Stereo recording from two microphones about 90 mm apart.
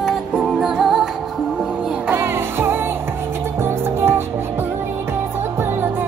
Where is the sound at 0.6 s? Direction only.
5° right (ahead or behind).